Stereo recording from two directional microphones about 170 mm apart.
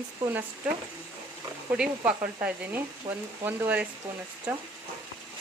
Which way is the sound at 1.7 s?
5° right (ahead or behind).